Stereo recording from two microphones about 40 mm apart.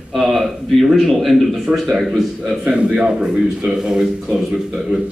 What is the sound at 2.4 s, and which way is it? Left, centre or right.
A man's voice, right.